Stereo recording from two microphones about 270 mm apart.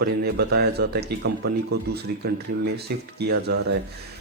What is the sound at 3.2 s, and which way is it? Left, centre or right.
Speech, right.